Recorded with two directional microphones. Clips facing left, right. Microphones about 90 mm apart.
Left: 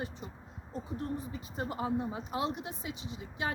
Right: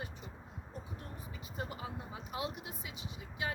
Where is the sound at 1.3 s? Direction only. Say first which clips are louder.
Left 5 dB; 35° left (ahead or behind).